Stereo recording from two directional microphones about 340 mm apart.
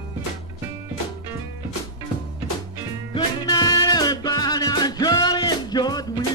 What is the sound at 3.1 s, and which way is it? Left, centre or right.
Music, centre.